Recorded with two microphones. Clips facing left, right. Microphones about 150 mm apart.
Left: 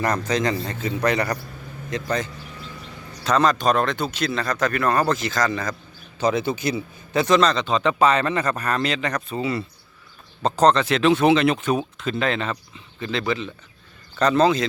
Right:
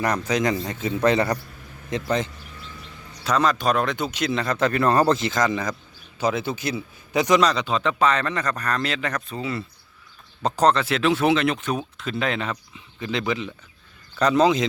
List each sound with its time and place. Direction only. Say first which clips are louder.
0.0 s a man's voice: even; 10° right (ahead or behind)
3.2 s speech: left 2 dB; 5° right (ahead or behind)
6.1 s a man's voice: left 2 dB; 5° right (ahead or behind)
7.1 s speech: left 1 dB; 15° right (ahead or behind)
7.9 s speech: left 4 dB; 10° left (ahead or behind)
10.4 s speech: left 2 dB; 10° right (ahead or behind)